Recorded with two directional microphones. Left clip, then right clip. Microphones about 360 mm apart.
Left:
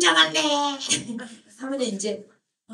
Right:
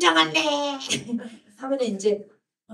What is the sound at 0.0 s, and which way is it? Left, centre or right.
Music, centre.